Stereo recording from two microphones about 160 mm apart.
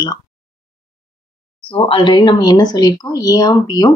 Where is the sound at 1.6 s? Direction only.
30° left (ahead or behind).